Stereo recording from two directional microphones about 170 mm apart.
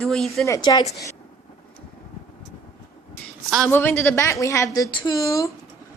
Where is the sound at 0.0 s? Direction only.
5° left (ahead or behind).